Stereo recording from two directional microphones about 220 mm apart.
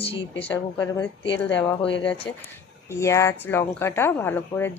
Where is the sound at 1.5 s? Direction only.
5° left (ahead or behind).